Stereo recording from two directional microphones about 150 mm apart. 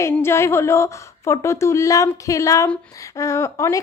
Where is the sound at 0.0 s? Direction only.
15° left (ahead or behind).